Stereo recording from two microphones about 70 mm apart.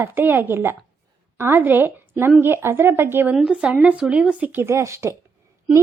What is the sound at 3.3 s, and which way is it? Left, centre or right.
A woman's voice, centre.